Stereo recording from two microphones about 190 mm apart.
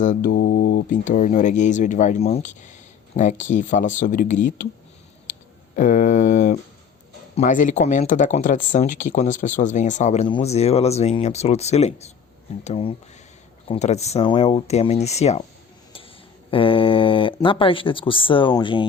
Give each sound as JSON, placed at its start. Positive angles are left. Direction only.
{"t": 0.0, "sound": "speech", "side_deg": 45}
{"t": 5.7, "sound": "speech", "side_deg": 45}
{"t": 16.5, "sound": "speech", "side_deg": 30}